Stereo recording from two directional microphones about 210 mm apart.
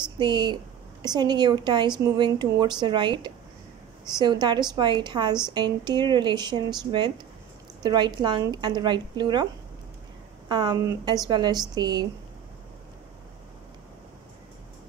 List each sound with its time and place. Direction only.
0.2 s a woman's voice: 20° right (ahead or behind)
10.5 s a woman's voice: 20° right (ahead or behind)